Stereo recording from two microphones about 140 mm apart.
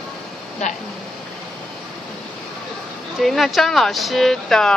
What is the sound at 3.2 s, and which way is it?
Speech, centre (ahead or behind).